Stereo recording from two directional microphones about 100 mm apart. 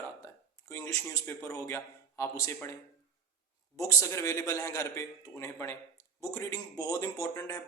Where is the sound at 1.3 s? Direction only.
30° left (ahead or behind).